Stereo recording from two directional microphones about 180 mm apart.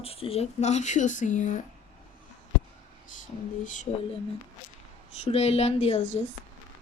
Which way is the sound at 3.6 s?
45° left (ahead or behind).